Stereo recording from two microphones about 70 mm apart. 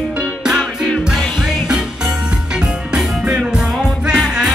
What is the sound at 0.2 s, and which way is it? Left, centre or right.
Music, centre.